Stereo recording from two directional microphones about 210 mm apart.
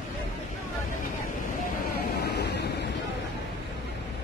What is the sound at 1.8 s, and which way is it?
Vehicle, 50° left (ahead or behind).